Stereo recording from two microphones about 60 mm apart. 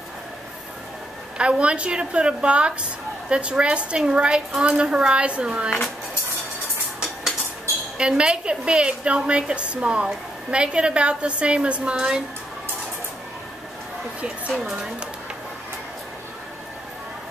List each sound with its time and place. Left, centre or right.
1.4 s a woman's voice: centre
8.0 s a woman's voice: centre
14.6 s a woman's voice: centre